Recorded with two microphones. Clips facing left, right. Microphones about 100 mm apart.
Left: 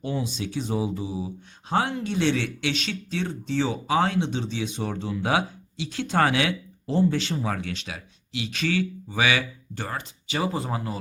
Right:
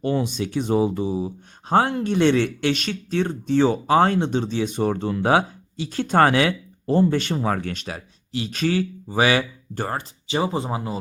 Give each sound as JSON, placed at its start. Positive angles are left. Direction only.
{"t": 0.0, "sound": "speech", "side_deg": -60}
{"t": 10.3, "sound": "speech", "side_deg": -25}